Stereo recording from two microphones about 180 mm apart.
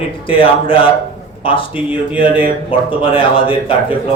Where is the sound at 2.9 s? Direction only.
30° left (ahead or behind).